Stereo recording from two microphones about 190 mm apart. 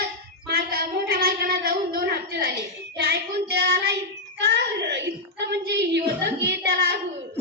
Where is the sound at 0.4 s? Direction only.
55° right (ahead or behind).